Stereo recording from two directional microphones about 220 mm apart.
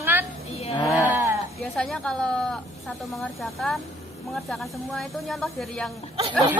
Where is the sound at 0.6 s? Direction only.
30° left (ahead or behind).